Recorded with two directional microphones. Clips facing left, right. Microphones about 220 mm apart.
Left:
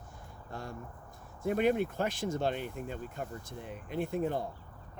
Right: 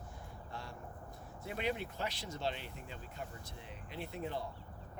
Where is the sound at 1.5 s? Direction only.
50° left (ahead or behind).